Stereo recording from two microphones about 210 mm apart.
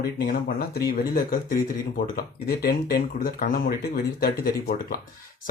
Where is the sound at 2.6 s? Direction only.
45° left (ahead or behind).